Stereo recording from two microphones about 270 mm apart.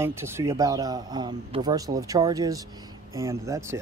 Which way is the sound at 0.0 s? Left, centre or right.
Centre.